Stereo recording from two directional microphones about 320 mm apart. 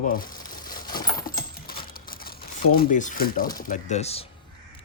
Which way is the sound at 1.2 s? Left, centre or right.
Left.